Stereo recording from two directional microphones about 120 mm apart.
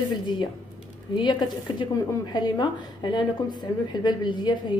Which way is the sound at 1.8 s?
35° left (ahead or behind).